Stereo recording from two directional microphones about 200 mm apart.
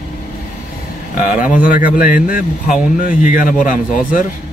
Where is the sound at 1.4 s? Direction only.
40° left (ahead or behind).